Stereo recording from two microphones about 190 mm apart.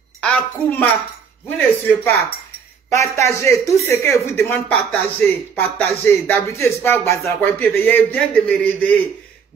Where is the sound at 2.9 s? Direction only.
15° left (ahead or behind).